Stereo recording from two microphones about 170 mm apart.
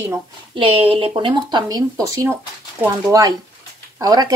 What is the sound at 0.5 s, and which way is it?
Speech, 30° right (ahead or behind).